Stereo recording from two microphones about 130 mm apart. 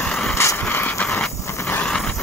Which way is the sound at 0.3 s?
20° left (ahead or behind).